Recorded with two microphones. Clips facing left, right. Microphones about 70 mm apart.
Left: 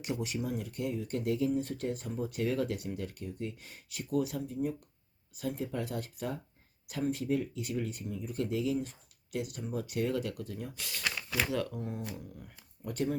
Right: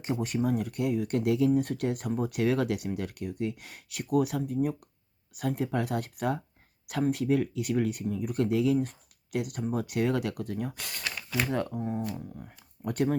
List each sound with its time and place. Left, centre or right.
0.0 s speech: right
11.7 s speech: right
12.8 s speech: right